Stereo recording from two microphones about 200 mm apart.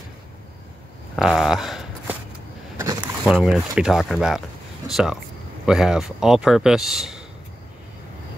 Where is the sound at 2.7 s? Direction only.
15° right (ahead or behind).